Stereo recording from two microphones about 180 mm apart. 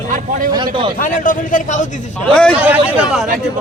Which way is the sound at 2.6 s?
10° right (ahead or behind).